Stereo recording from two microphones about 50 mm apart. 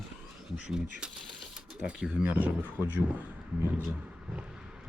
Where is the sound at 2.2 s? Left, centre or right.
Right.